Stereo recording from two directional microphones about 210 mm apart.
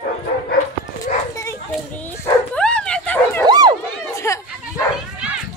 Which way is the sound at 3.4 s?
20° right (ahead or behind).